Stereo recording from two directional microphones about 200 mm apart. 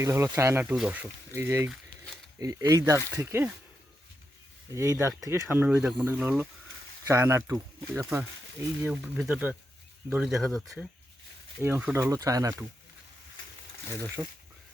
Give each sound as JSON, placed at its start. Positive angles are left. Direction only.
{"t": 0.0, "sound": "speech", "side_deg": -15}
{"t": 4.7, "sound": "speech", "side_deg": -15}
{"t": 8.9, "sound": "speech", "side_deg": 0}
{"t": 14.2, "sound": "speech", "side_deg": -15}